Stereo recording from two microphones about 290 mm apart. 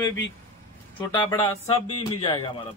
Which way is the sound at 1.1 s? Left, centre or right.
Centre.